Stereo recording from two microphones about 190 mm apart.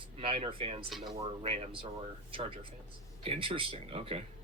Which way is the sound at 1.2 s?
30° right (ahead or behind).